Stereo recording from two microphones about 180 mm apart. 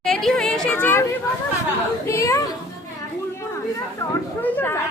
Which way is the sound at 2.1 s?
15° left (ahead or behind).